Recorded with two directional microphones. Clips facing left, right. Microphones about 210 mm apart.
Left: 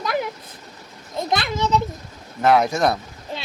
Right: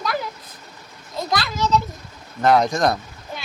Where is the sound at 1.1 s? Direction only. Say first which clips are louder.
Left 1 dB; 20° left (ahead or behind).